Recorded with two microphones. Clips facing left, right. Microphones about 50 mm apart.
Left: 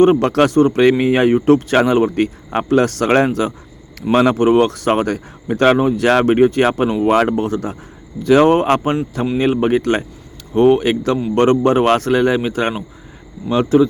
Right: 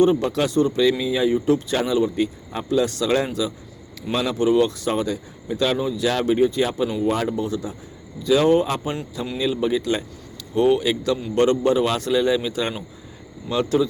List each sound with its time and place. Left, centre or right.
0.0 s speech: left
7.0 s speech: left
10.5 s speech: left